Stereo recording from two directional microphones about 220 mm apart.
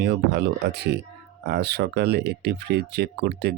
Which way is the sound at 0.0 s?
50° right (ahead or behind).